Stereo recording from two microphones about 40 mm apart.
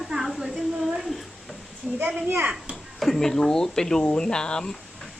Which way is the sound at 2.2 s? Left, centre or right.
Right.